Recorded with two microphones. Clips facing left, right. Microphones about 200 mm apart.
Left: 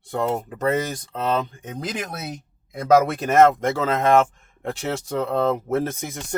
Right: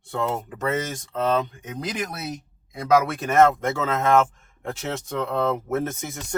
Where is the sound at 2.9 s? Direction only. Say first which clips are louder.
Left 3 dB; 40° left (ahead or behind).